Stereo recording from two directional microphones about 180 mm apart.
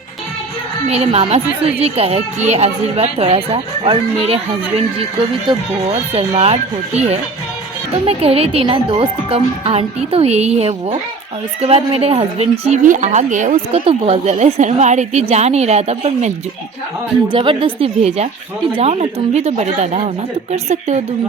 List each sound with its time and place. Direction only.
0.9 s speech: 35° right (ahead or behind)
5.5 s speech: 30° right (ahead or behind)
13.8 s speech: 30° right (ahead or behind)